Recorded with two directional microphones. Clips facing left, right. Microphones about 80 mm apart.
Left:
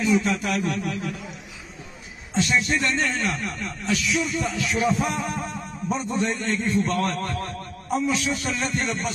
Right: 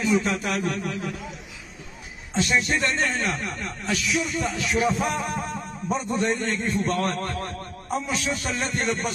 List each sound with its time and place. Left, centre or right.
0.0 s speech: right
2.4 s speech: right
8.7 s music: right